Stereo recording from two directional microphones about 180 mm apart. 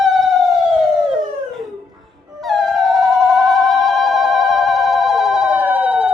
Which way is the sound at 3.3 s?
Centre (ahead or behind).